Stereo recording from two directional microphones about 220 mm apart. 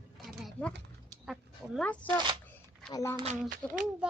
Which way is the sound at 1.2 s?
Centre (ahead or behind).